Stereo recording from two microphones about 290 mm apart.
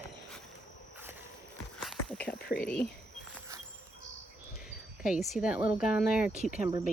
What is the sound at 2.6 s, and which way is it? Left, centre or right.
Speech, centre.